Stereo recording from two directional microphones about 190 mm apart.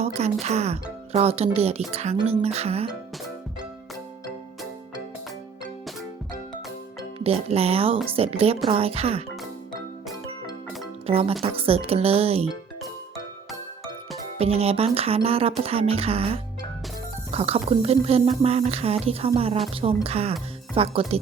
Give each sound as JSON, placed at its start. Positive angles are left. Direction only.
{"t": 0.0, "sound": "speech", "side_deg": -35}
{"t": 7.3, "sound": "speech", "side_deg": -30}
{"t": 11.0, "sound": "speech", "side_deg": -30}
{"t": 14.3, "sound": "speech", "side_deg": -30}